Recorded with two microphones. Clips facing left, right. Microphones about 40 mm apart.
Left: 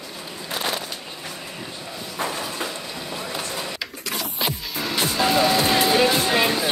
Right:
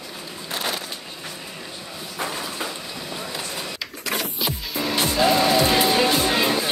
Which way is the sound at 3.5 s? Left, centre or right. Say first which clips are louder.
Left 1 dB; centre.